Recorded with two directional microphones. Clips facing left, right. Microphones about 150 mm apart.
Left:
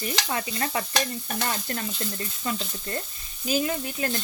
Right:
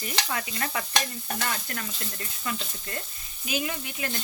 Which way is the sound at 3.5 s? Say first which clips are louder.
Left 5 dB; 35° left (ahead or behind).